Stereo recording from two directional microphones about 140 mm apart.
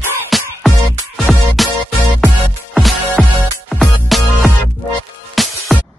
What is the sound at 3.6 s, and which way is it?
Music, centre (ahead or behind).